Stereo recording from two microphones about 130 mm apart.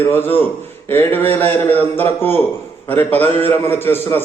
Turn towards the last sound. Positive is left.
turn(degrees=15)  # may be behind; listen again after turning